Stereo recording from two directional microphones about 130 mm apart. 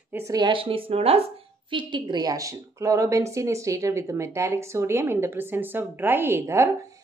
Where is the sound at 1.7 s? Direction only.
40° right (ahead or behind).